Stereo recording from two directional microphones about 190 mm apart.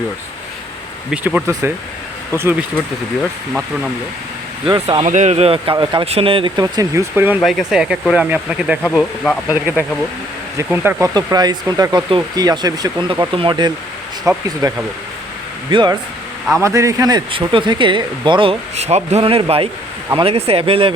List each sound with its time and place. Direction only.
1.1 s speech: 5° right (ahead or behind)
4.6 s speech: 25° right (ahead or behind)
5.0 s speech: 40° right (ahead or behind); by 7.3 s 15° right (ahead or behind)
7.4 s speech: 5° right (ahead or behind)
8.8 s speech: 10° left (ahead or behind)
10.7 s speech: 15° right (ahead or behind)
15.7 s speech: 25° right (ahead or behind)